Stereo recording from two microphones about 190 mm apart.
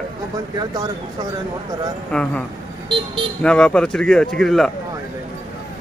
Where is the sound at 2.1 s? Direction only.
5° left (ahead or behind).